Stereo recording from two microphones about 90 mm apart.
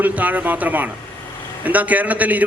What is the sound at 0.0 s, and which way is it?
A man's voice, 15° right (ahead or behind).